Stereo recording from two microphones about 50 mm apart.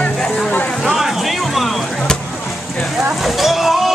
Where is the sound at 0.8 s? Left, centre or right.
Centre.